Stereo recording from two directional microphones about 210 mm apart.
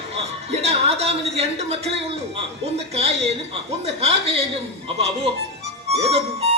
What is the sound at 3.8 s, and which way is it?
Chuckle, 30° right (ahead or behind).